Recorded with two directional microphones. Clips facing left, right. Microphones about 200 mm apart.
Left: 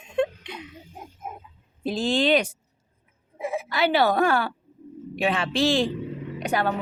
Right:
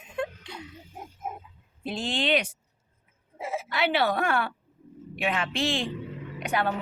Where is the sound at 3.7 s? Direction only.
40° left (ahead or behind).